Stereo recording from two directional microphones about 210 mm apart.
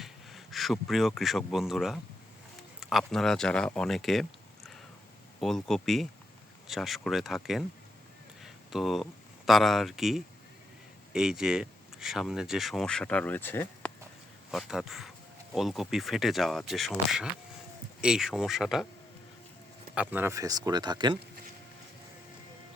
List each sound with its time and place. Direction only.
0.0 s speech: centre (ahead or behind)
8.4 s a sound: centre (ahead or behind)
9.5 s speech: centre (ahead or behind)
14.5 s speech: centre (ahead or behind)
20.0 s speech: 10° right (ahead or behind)